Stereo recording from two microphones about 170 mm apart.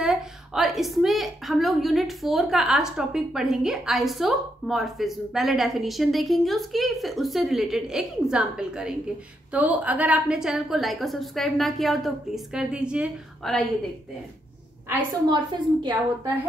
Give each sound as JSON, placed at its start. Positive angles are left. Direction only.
{"t": 0.0, "sound": "a woman's voice", "side_deg": 0}
{"t": 15.2, "sound": "a woman's voice", "side_deg": -25}